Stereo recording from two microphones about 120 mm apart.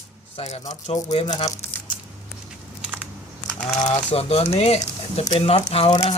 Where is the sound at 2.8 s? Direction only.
10° right (ahead or behind).